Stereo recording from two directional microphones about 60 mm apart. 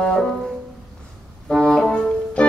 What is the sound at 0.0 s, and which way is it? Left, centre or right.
Music, centre.